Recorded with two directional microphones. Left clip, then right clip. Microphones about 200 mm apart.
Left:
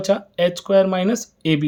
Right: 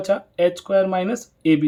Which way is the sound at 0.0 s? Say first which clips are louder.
Even; 45° left (ahead or behind).